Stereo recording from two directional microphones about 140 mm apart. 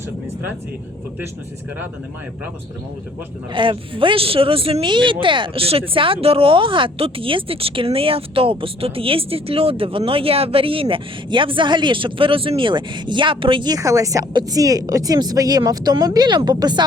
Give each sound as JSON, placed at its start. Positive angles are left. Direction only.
{"t": 3.5, "sound": "speech", "side_deg": -35}